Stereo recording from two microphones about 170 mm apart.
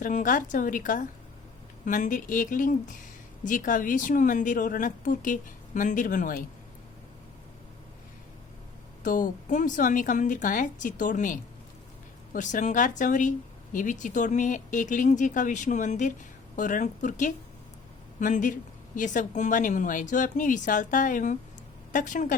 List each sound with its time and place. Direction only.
0.0 s speech: 50° left (ahead or behind)
9.0 s speech: 50° left (ahead or behind)